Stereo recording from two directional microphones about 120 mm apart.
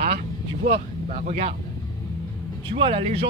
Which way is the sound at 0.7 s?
70° right (ahead or behind).